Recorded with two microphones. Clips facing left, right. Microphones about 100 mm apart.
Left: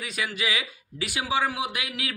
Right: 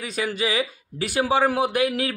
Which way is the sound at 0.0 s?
35° right (ahead or behind).